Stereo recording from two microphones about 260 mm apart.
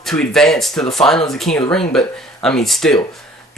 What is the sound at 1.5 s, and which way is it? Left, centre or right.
Speech, left.